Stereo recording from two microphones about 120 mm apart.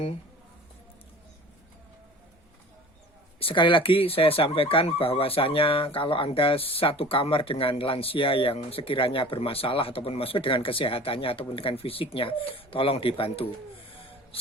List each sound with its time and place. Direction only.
3.4 s speech: 45° left (ahead or behind)